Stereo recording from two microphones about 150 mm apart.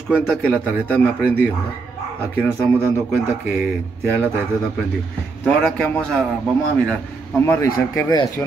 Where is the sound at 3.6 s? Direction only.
15° right (ahead or behind).